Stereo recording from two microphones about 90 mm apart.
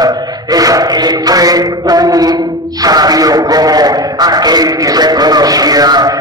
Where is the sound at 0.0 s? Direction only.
45° right (ahead or behind).